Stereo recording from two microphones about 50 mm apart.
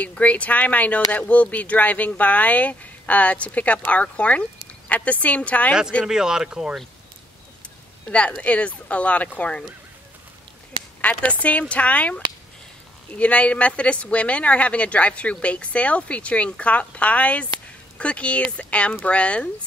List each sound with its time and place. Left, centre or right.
0.0 s speech: left
6.0 s speech: centre
8.1 s speech: left
11.0 s speech: left